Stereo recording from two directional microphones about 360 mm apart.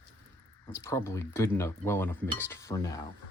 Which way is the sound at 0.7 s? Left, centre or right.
Centre.